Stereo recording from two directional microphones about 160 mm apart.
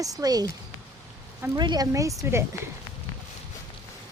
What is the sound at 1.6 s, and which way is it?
Speech, 25° right (ahead or behind).